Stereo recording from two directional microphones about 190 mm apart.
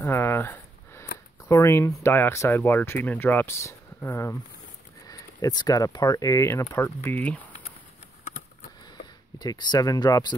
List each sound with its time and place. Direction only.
0.0 s a sound: 10° left (ahead or behind)
1.5 s speech: 15° left (ahead or behind)
9.4 s speech: 20° left (ahead or behind)